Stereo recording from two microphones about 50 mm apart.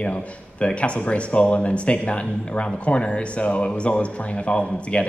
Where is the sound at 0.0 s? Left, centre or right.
Left.